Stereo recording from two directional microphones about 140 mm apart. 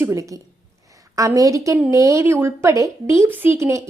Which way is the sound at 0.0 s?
20° right (ahead or behind).